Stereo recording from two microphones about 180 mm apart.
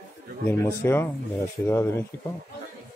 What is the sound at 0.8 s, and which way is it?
A man's voice, 15° left (ahead or behind).